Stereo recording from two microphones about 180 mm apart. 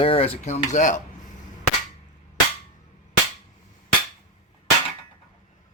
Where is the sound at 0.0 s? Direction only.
30° left (ahead or behind).